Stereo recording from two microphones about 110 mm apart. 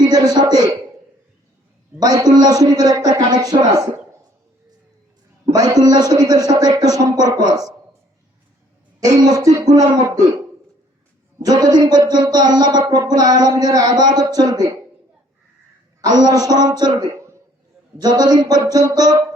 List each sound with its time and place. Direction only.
0.0 s a man's voice: 40° right (ahead or behind)
2.0 s speech: 35° right (ahead or behind)
5.5 s speech: 35° right (ahead or behind)
9.2 s speech: 35° right (ahead or behind)
11.4 s speech: 35° right (ahead or behind)
16.0 s speech: 40° right (ahead or behind)